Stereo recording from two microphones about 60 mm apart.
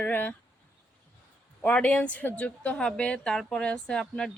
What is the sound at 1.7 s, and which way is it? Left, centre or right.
Speech, left.